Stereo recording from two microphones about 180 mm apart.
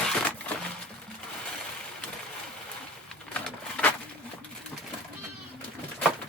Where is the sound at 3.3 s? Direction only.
5° left (ahead or behind).